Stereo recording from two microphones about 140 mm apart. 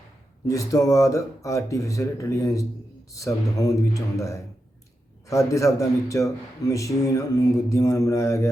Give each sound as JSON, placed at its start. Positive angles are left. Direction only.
{"t": 0.4, "sound": "speech", "side_deg": 25}